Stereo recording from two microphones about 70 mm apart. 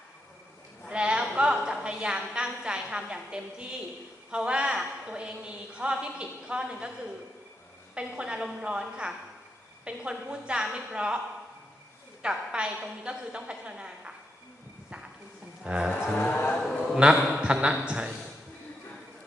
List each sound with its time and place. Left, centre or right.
0.9 s a woman's voice: centre
7.9 s a woman's voice: centre
12.2 s a woman's voice: centre
15.6 s a woman's voice: centre
16.1 s a man's voice: left
17.0 s a man's voice: centre